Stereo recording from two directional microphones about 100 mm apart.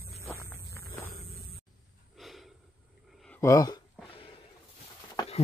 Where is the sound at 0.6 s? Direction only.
30° left (ahead or behind).